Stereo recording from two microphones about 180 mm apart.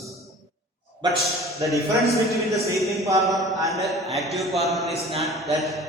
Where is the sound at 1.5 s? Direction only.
15° right (ahead or behind).